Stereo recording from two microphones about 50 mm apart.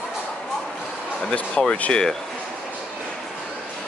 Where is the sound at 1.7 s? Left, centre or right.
Centre.